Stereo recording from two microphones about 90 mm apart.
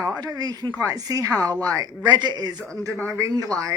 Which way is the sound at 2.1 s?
55° right (ahead or behind).